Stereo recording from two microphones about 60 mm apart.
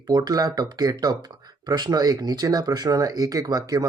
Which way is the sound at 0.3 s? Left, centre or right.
Right.